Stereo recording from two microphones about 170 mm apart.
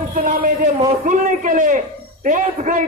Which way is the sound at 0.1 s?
55° right (ahead or behind).